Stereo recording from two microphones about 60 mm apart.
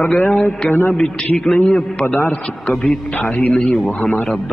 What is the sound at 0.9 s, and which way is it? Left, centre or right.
A man's voice, centre.